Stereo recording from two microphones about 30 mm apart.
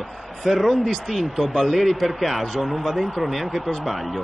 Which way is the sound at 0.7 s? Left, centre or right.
Centre.